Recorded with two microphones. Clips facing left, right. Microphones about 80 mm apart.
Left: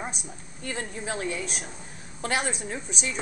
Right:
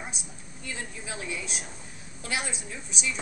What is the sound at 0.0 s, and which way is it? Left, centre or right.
A woman's voice, left.